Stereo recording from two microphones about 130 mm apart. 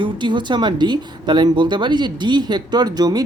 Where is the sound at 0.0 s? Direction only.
35° right (ahead or behind).